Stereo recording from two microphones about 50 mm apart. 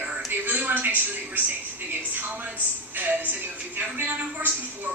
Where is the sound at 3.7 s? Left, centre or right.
Right.